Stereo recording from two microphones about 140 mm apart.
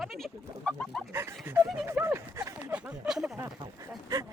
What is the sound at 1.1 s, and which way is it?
Speech, 15° right (ahead or behind).